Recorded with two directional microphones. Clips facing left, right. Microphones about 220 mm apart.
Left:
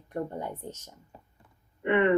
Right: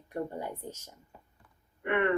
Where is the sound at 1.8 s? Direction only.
20° left (ahead or behind).